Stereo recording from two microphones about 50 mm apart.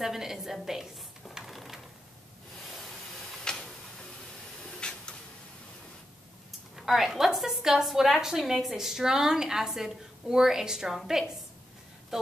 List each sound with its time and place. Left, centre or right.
0.0 s a sound: centre
2.7 s steam: centre
3.4 s tick-tock: centre
4.6 s spray: centre
6.9 s a woman's voice: centre